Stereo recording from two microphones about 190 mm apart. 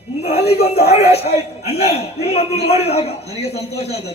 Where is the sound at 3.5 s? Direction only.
60° left (ahead or behind).